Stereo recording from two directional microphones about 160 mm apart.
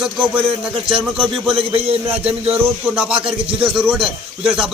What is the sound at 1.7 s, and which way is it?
Speech, 40° right (ahead or behind).